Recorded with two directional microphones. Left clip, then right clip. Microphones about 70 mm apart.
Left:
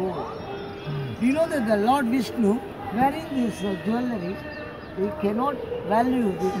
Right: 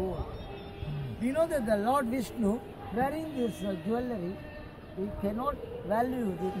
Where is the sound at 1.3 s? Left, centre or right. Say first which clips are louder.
Left 5 dB; right.